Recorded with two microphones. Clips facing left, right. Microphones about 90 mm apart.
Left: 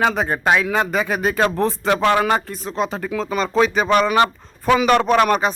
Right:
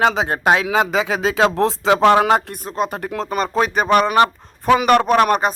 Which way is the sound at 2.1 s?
65° right (ahead or behind).